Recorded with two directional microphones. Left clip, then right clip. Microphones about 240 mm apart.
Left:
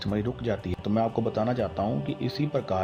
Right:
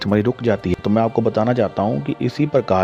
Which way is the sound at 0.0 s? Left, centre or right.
Right.